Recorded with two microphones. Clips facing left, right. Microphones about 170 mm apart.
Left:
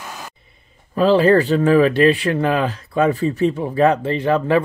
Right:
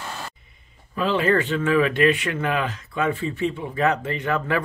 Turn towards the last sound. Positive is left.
turn(degrees=30)  # may be behind; listen again after turning